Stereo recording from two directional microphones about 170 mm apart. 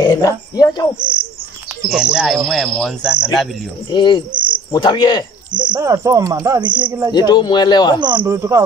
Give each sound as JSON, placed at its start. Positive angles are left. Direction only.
{"t": 0.0, "sound": "speech", "side_deg": 20}
{"t": 1.9, "sound": "speech", "side_deg": -5}
{"t": 3.9, "sound": "speech", "side_deg": 25}
{"t": 5.5, "sound": "speech", "side_deg": -25}
{"t": 7.1, "sound": "speech", "side_deg": 25}
{"t": 8.0, "sound": "speech", "side_deg": -25}